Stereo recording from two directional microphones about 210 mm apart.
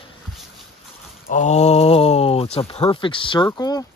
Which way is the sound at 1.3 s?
35° left (ahead or behind).